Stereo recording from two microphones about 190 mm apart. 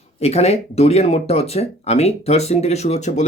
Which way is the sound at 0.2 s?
35° left (ahead or behind).